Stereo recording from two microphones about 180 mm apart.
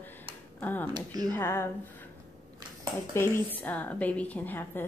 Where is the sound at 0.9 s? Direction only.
20° right (ahead or behind).